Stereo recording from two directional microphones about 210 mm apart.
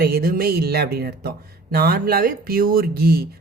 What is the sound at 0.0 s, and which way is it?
Speech, 45° right (ahead or behind).